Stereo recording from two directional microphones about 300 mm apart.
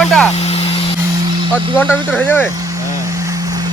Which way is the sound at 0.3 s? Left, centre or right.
Centre.